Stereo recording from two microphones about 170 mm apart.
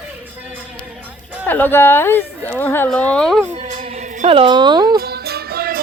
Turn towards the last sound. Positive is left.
turn(degrees=-60)  # may be behind; listen again after turning